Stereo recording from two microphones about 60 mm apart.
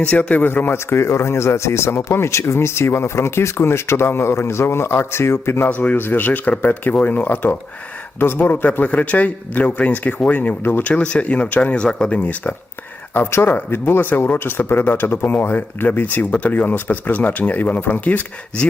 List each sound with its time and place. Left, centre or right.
0.0 s speech: left
5.6 s speech: left
13.1 s speech: left